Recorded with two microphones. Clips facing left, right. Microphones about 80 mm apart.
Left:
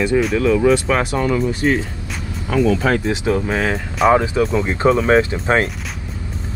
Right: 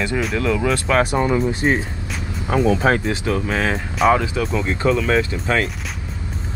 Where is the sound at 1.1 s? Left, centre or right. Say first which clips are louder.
Even; right.